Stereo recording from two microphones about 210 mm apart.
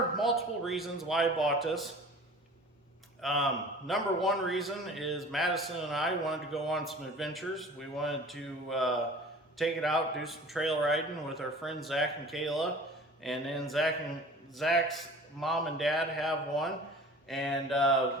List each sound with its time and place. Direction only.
0.2 s a man's voice: centre (ahead or behind)
3.2 s a man's voice: centre (ahead or behind)